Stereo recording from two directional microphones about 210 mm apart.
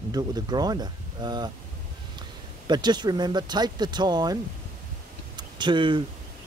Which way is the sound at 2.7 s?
20° right (ahead or behind).